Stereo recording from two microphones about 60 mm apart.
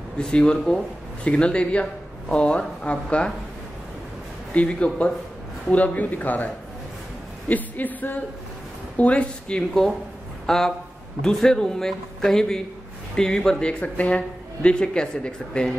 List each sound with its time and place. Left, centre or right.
0.2 s a man's voice: centre
4.6 s a man's voice: centre